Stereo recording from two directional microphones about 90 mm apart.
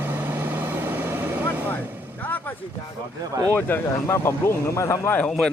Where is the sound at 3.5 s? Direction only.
25° left (ahead or behind).